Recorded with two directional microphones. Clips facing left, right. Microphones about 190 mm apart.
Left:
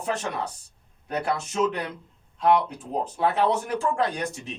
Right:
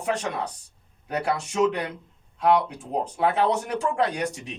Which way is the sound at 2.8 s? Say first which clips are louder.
Right 1 dB; 15° right (ahead or behind).